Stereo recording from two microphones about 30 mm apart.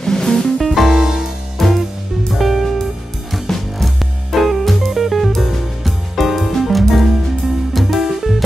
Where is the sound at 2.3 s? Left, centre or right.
Centre.